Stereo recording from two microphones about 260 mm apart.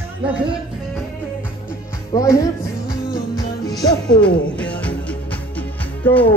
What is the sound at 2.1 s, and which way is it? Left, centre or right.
Speech, centre.